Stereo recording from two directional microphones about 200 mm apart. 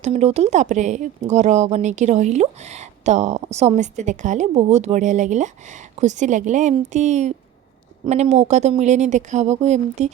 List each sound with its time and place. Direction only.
0.0 s speech: 35° right (ahead or behind)